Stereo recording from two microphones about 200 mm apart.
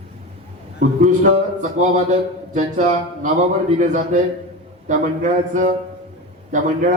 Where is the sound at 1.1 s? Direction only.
40° right (ahead or behind).